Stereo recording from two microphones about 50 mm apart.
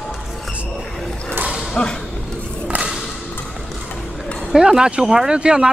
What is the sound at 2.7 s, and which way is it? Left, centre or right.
Whip, right.